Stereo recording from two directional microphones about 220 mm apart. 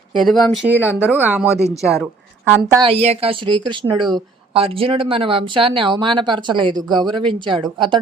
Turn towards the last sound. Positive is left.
turn(degrees=-20)  # may be behind; listen again after turning